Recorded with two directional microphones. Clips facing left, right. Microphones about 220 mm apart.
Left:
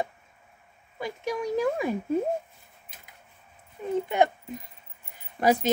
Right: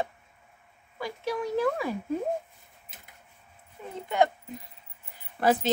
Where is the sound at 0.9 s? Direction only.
20° left (ahead or behind).